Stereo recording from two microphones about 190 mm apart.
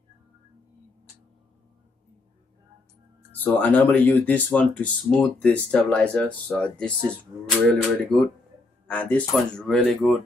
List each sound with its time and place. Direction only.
3.3 s speech: 10° left (ahead or behind)